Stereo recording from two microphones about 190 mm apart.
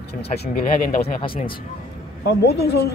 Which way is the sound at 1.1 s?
25° left (ahead or behind).